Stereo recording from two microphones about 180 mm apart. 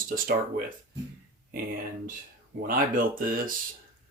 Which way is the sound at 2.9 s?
50° right (ahead or behind).